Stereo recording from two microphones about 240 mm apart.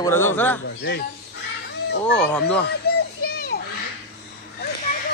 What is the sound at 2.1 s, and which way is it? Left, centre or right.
Speech, centre.